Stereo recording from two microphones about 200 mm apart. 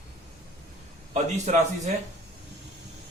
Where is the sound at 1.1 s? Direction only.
35° right (ahead or behind).